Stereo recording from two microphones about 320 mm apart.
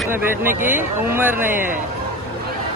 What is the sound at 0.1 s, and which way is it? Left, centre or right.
Speech, centre.